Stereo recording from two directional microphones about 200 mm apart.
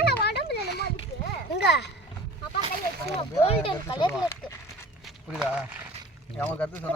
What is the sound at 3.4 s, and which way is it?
Speech, 25° left (ahead or behind).